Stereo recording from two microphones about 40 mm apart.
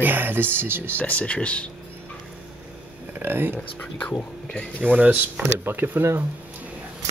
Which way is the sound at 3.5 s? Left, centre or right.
Left.